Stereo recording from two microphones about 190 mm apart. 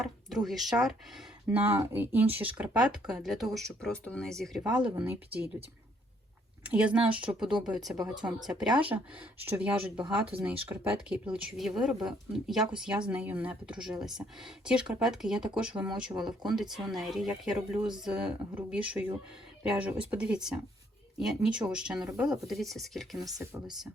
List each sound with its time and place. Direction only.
0.0 s speech: centre (ahead or behind)
6.7 s speech: 5° right (ahead or behind)
10.3 s speech: 30° right (ahead or behind)
10.7 s speech: 10° right (ahead or behind)
23.2 s speech: 15° right (ahead or behind)